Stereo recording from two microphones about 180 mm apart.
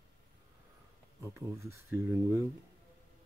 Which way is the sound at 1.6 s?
15° right (ahead or behind).